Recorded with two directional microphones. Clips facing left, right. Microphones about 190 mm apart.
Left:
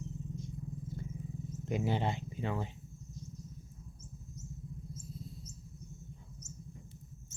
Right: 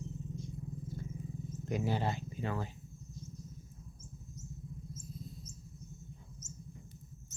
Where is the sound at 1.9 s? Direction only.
20° left (ahead or behind).